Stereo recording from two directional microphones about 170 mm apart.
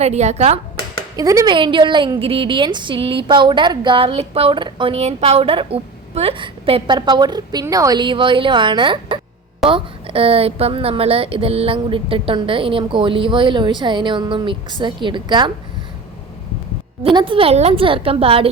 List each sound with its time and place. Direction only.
0.0 s a woman's voice: 40° right (ahead or behind)
1.1 s a woman's voice: 20° right (ahead or behind)
17.0 s a woman's voice: 30° right (ahead or behind)